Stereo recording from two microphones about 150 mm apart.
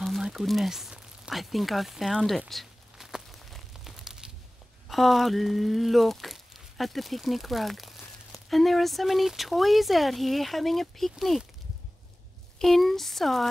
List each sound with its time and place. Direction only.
0.0 s a sound: centre (ahead or behind)
4.8 s speech: centre (ahead or behind)
12.5 s speech: centre (ahead or behind)